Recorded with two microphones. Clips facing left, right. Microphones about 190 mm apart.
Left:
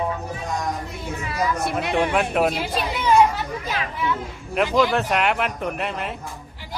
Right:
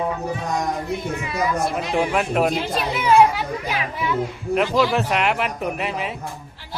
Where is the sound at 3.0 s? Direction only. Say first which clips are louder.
Right 2 dB; 10° right (ahead or behind).